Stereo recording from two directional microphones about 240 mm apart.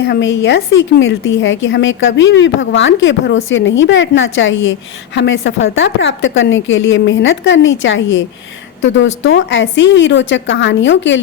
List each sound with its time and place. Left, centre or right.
0.0 s a woman's voice: left
9.2 s a woman's voice: left